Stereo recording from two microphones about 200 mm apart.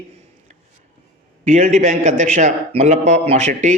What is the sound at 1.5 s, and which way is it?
Speech, 35° right (ahead or behind).